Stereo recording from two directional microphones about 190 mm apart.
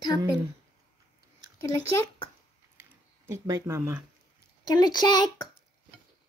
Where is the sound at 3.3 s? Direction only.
15° right (ahead or behind).